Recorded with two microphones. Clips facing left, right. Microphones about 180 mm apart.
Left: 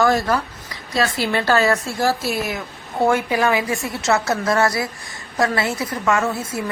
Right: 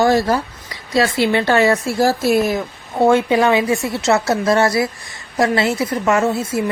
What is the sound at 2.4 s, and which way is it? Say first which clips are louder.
A woman's voice: right 7 dB; 30° right (ahead or behind).